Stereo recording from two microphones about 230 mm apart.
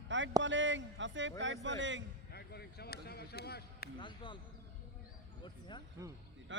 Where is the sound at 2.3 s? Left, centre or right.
Left.